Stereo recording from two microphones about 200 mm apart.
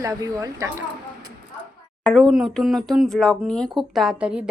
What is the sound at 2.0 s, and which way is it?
Speech, centre (ahead or behind).